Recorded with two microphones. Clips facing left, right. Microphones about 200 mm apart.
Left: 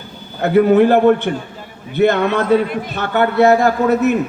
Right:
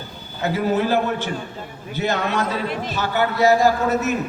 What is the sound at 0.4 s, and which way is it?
A man's voice, 60° left (ahead or behind).